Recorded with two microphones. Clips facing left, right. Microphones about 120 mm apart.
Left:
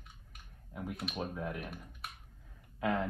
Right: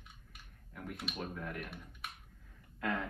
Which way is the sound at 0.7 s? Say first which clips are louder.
Left 4 dB; 10° left (ahead or behind).